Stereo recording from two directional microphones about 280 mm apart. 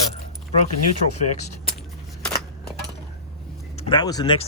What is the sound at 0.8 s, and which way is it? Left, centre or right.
Speech, left.